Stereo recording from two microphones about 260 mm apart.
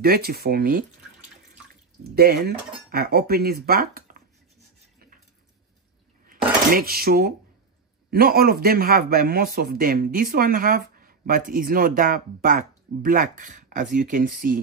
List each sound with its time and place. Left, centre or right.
0.0 s a man's voice: right
2.1 s a man's voice: right
6.2 s dishes: right
8.1 s a man's voice: right